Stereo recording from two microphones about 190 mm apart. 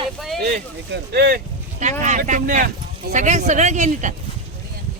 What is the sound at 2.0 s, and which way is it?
Speech, 40° right (ahead or behind).